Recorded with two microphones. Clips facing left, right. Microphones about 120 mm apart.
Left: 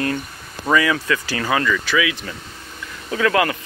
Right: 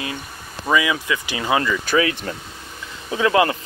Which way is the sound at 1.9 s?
45° right (ahead or behind).